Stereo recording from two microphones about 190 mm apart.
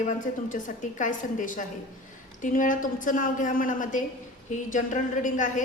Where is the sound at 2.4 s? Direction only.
45° left (ahead or behind).